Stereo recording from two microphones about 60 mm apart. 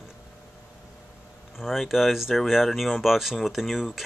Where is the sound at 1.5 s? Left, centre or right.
Centre.